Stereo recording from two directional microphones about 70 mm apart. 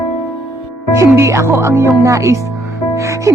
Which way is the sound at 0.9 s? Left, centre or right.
Right.